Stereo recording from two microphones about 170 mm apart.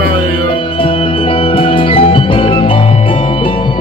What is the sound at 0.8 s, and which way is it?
Music, 30° left (ahead or behind).